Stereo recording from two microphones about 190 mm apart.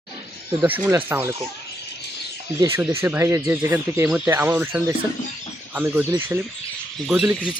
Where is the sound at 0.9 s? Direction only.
10° right (ahead or behind).